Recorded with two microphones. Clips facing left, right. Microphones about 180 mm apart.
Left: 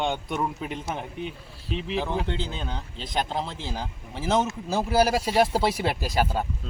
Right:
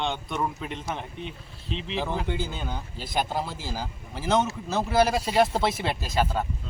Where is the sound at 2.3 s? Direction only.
5° right (ahead or behind).